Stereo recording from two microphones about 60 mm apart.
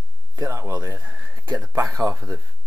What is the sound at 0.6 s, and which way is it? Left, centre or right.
Speech, right.